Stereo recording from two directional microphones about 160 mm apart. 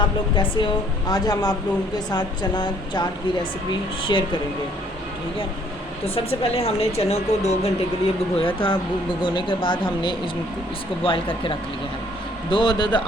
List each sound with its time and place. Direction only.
0.0 s a woman's voice: 30° left (ahead or behind)
4.1 s a woman's voice: 25° left (ahead or behind)
6.1 s a woman's voice: 35° left (ahead or behind)